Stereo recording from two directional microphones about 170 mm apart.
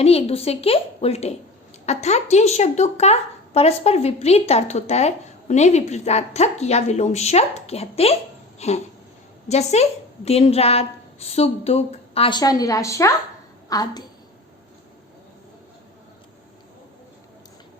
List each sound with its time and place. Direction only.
0.0 s a woman's voice: 35° left (ahead or behind)
8.5 s a sound: 40° left (ahead or behind)
9.5 s a woman's voice: 40° left (ahead or behind); by 14.0 s 20° left (ahead or behind)